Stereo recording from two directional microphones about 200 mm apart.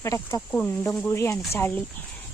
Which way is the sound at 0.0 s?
15° left (ahead or behind).